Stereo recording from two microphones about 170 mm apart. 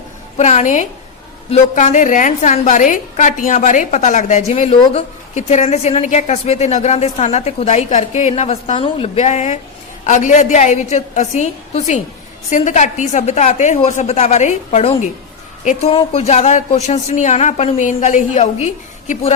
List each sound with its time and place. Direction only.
0.3 s a woman's voice: 45° left (ahead or behind)